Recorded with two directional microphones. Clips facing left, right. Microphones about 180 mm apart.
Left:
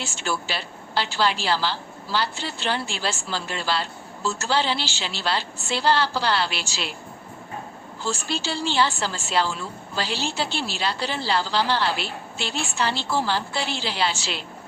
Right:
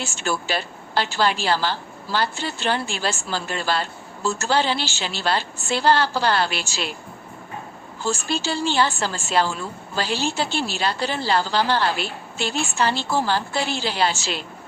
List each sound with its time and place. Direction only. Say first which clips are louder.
0.0 s a woman's voice: right 2 dB; 50° right (ahead or behind)
8.0 s a woman's voice: right 3 dB; 50° right (ahead or behind)